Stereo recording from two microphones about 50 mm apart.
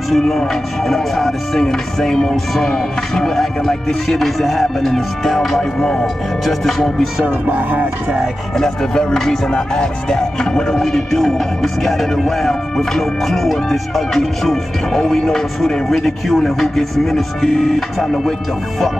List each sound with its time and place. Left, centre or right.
0.1 s speech: centre
2.6 s music: centre
5.6 s speech: centre
6.4 s music: centre
7.2 s music: right
8.5 s music: centre
15.0 s speech: centre
16.3 s music: centre